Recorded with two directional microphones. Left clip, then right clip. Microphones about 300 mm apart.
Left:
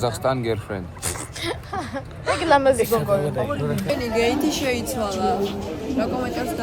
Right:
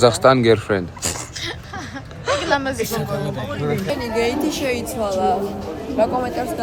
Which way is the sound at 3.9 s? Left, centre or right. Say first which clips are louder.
Left 2 dB; centre.